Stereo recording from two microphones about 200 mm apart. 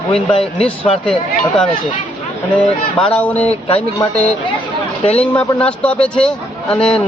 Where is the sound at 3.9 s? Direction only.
15° left (ahead or behind).